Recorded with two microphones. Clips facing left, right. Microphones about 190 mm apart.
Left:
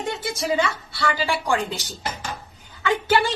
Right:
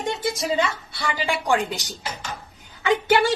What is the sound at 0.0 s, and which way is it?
Speech, 20° right (ahead or behind).